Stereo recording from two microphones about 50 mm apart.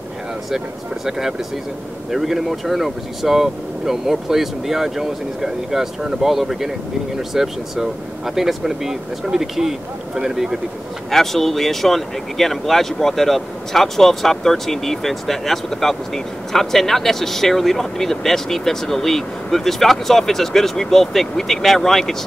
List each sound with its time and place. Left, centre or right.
1.0 s speech: centre
11.1 s speech: centre